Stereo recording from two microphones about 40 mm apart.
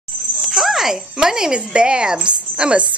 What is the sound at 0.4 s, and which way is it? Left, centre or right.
Speech, centre.